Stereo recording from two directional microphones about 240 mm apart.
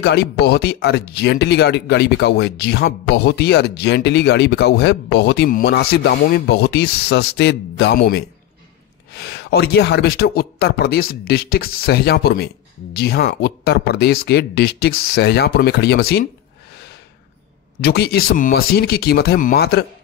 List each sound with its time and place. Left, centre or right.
0.0 s speech: left
9.4 s speech: left
17.7 s speech: left